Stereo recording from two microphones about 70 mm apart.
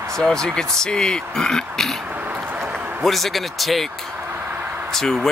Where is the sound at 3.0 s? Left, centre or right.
Centre.